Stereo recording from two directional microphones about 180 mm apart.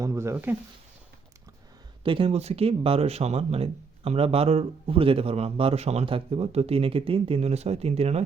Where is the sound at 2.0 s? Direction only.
30° right (ahead or behind).